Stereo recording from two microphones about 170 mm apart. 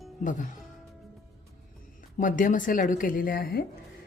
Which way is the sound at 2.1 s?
50° left (ahead or behind).